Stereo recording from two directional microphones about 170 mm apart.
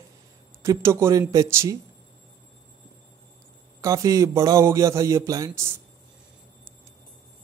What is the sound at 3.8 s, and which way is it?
Speech, 20° right (ahead or behind).